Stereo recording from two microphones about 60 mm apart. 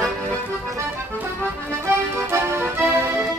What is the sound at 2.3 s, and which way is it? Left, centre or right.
Music, right.